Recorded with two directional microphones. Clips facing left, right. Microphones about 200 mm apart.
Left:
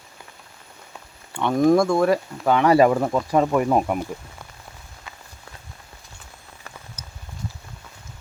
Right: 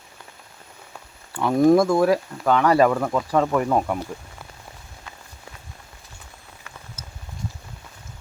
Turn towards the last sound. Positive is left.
turn(degrees=15)  # may be behind; listen again after turning